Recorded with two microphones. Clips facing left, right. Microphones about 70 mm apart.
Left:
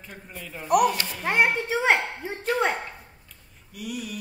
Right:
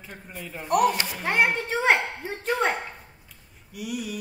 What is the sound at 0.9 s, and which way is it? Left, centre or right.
Speech, centre.